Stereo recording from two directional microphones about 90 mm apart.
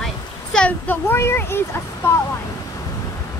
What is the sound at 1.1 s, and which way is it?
Speech, 25° left (ahead or behind).